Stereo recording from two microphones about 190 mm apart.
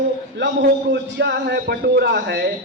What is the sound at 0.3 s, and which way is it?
A man's voice, 70° right (ahead or behind).